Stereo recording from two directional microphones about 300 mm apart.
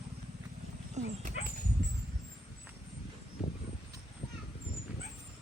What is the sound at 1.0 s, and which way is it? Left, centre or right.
Dog, right.